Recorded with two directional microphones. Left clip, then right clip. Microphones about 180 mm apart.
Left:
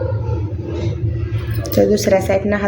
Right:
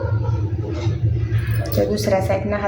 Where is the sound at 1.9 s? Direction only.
35° left (ahead or behind).